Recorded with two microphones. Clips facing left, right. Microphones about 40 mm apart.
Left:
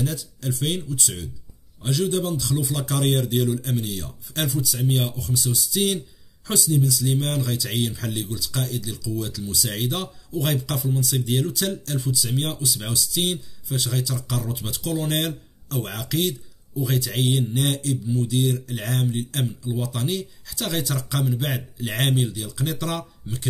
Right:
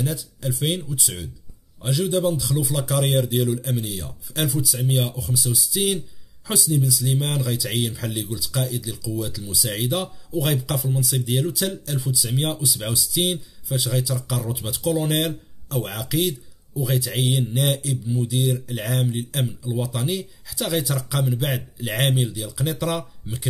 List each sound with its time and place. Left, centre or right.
0.0 s a man's voice: centre